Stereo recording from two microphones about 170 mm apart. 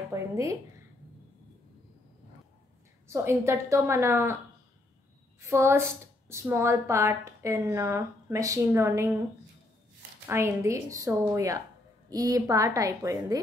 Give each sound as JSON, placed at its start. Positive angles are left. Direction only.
{"t": 0.1, "sound": "speech", "side_deg": -15}
{"t": 3.1, "sound": "a woman's voice", "side_deg": -15}
{"t": 5.4, "sound": "a woman's voice", "side_deg": -15}
{"t": 10.2, "sound": "a woman's voice", "side_deg": -15}